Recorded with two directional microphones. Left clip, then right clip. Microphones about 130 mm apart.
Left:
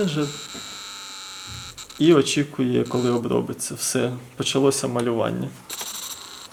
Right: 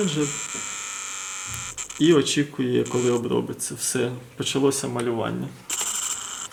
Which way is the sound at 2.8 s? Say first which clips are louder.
Even; 15° left (ahead or behind).